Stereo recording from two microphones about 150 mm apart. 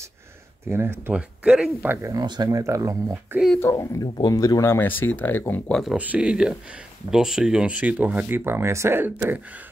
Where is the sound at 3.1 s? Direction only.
5° right (ahead or behind).